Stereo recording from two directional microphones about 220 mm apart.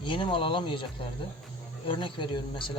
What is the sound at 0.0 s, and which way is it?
Speech, 20° left (ahead or behind).